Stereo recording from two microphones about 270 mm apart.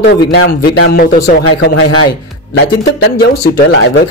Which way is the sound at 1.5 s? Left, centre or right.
Left.